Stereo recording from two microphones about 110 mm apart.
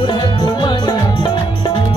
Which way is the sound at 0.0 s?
45° left (ahead or behind).